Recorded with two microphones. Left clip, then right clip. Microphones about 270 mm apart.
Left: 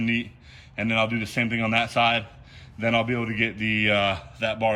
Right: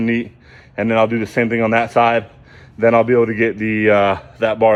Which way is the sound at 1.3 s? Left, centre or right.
Centre.